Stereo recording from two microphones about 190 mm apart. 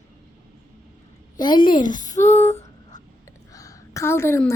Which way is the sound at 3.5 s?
15° left (ahead or behind).